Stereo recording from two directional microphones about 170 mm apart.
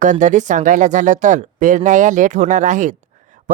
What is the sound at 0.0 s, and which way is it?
Speech, 45° right (ahead or behind).